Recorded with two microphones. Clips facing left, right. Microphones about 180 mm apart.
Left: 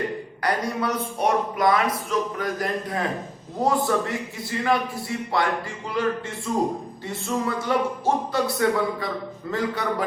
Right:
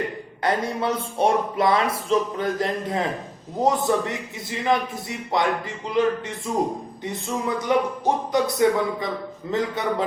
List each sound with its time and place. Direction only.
0.4 s speech: 25° right (ahead or behind)